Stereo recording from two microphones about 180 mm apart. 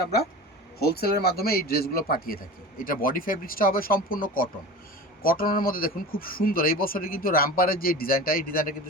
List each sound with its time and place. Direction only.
0.0 s a man's voice: 60° left (ahead or behind)